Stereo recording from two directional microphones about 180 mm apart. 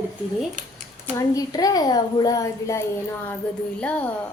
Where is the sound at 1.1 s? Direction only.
20° left (ahead or behind).